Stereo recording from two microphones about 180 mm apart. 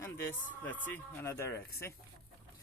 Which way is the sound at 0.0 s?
15° left (ahead or behind).